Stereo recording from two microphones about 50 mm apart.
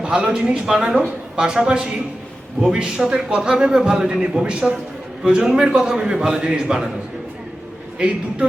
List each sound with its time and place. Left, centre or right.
0.0 s a man's voice: centre
7.9 s a man's voice: centre